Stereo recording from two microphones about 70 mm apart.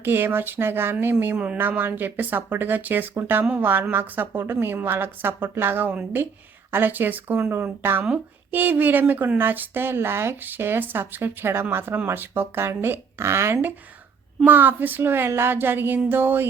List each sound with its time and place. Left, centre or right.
0.0 s speech: right